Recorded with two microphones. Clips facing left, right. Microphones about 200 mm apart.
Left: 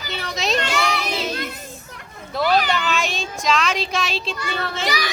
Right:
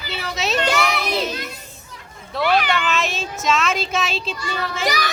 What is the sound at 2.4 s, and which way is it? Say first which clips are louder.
Speech: even; 40° left (ahead or behind).